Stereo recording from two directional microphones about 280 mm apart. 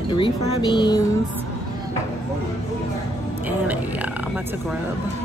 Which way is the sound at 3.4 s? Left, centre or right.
Centre.